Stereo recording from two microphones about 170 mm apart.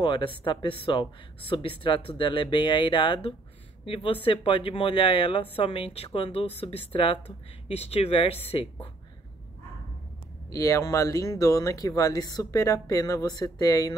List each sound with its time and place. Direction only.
0.0 s speech: 30° left (ahead or behind)
10.5 s speech: 20° left (ahead or behind)